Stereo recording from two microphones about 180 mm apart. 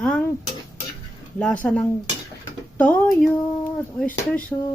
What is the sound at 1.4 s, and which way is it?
Speech, 5° left (ahead or behind).